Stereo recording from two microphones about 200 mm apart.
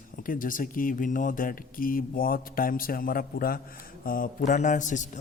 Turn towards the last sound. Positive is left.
turn(degrees=40)  # may be behind; listen again after turning